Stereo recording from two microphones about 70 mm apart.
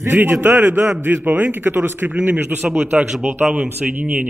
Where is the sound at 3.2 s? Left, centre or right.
Right.